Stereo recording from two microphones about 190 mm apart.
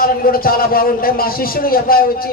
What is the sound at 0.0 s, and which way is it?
A man's voice, 50° left (ahead or behind).